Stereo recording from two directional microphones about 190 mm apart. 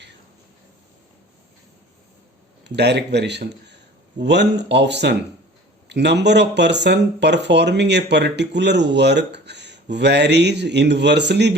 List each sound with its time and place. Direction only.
2.6 s speech: 60° right (ahead or behind)